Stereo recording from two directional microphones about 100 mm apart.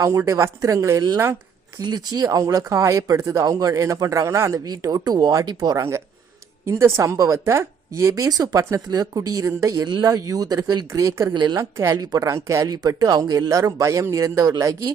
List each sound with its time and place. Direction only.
0.0 s a woman's voice: 30° right (ahead or behind)
1.8 s a woman's voice: 45° right (ahead or behind)
6.7 s a woman's voice: 25° right (ahead or behind)
9.8 s a woman's voice: 45° right (ahead or behind)